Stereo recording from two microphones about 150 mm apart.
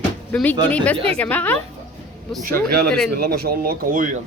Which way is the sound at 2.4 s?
90° right.